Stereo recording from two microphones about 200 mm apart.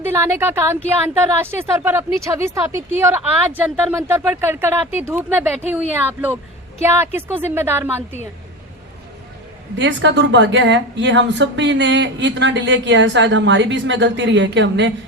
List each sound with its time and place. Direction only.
0.0 s speech: 10° right (ahead or behind)
9.7 s speech: 65° right (ahead or behind)